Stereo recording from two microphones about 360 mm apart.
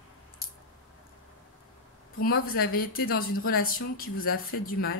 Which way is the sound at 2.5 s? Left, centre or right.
Left.